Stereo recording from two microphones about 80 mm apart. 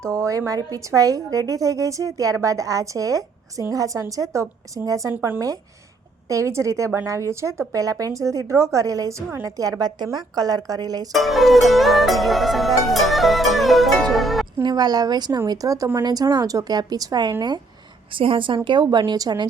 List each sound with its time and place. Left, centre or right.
0.0 s speech: right
5.1 s speech: right
6.2 s speech: right
11.1 s music: centre
14.6 s a woman's voice: right
15.4 s a woman's voice: right
18.1 s a woman's voice: right